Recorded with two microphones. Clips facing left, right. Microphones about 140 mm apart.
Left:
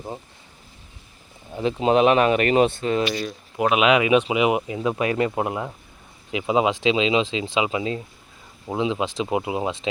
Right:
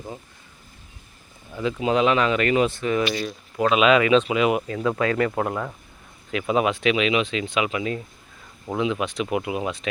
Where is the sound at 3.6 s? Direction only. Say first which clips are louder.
Right 1 dB; 15° left (ahead or behind).